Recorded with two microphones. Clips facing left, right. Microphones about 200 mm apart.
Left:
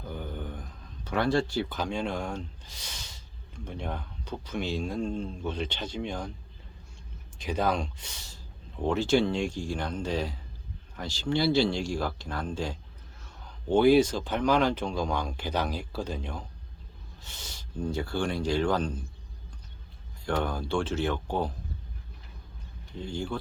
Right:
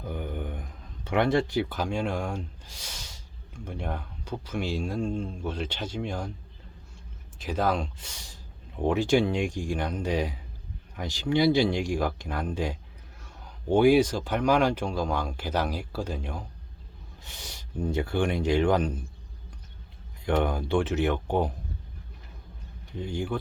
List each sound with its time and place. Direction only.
0.1 s a sound: 15° right (ahead or behind)
1.0 s speech: 20° right (ahead or behind)
7.3 s speech: 5° right (ahead or behind)
13.7 s speech: 10° right (ahead or behind)
20.2 s speech: 20° right (ahead or behind)
23.0 s speech: 15° right (ahead or behind)